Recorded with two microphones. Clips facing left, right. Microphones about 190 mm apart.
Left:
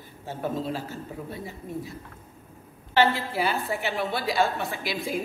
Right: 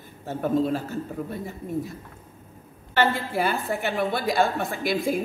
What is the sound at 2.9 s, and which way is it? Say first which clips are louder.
A woman's voice: even; 50° right (ahead or behind).